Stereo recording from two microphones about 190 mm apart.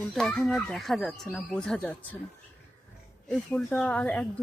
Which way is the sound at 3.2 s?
5° left (ahead or behind).